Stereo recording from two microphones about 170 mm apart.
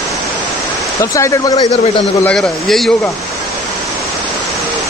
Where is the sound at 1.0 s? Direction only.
20° left (ahead or behind).